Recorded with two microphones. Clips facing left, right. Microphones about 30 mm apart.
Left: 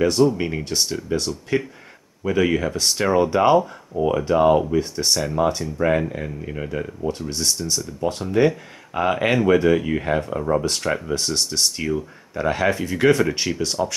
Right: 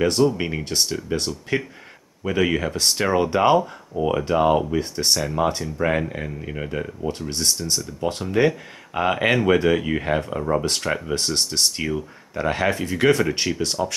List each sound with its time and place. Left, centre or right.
0.3 s speech: centre
1.1 s speech: centre
2.2 s speech: centre